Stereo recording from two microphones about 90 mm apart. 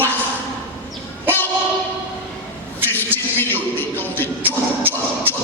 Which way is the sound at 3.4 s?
20° left (ahead or behind).